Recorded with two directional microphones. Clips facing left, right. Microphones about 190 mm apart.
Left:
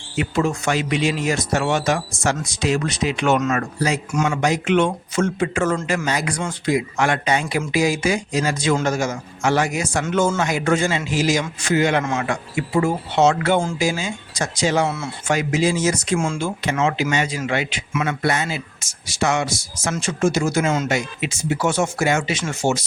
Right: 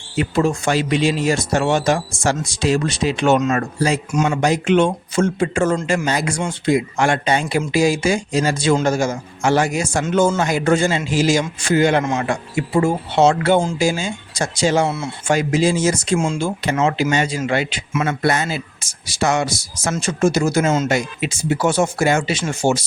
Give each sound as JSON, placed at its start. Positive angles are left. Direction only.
{"t": 0.2, "sound": "a man's voice", "side_deg": -35}
{"t": 16.4, "sound": "speech", "side_deg": -35}